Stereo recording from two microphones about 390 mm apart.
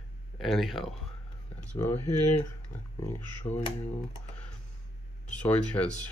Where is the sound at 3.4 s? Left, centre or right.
Centre.